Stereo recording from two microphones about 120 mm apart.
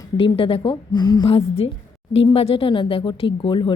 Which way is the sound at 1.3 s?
55° left (ahead or behind).